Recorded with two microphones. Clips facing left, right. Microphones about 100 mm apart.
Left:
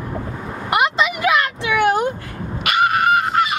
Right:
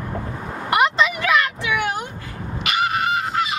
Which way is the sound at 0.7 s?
5° left (ahead or behind).